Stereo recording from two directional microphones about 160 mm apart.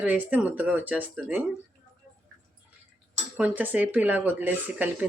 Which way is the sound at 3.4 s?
10° right (ahead or behind).